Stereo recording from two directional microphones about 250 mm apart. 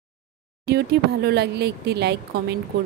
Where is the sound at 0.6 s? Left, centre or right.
Right.